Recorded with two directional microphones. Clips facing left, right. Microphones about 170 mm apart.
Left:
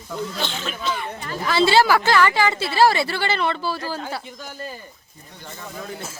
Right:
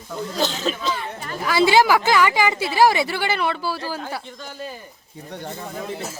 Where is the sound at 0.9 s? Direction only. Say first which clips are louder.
Even; 30° right (ahead or behind).